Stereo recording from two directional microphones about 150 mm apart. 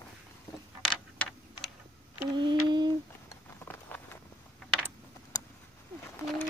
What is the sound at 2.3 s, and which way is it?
Mantra, 30° right (ahead or behind).